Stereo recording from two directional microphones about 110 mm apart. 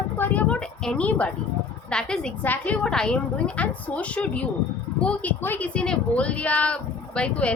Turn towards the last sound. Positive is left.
turn(degrees=10)  # may be behind; listen again after turning